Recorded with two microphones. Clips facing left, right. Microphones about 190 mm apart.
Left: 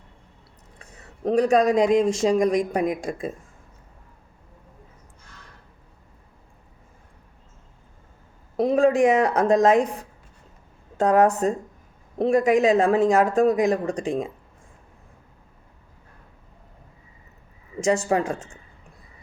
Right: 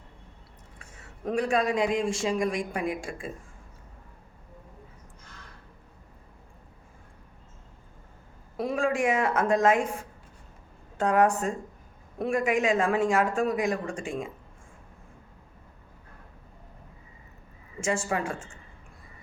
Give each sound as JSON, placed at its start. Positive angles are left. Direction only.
{"t": 0.8, "sound": "a man's voice", "side_deg": 35}
{"t": 8.5, "sound": "a woman's voice", "side_deg": 40}
{"t": 10.9, "sound": "a man's voice", "side_deg": 35}
{"t": 17.7, "sound": "a man's voice", "side_deg": 40}